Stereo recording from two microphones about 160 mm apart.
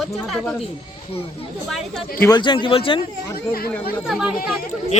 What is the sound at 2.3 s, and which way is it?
Speech, 30° left (ahead or behind).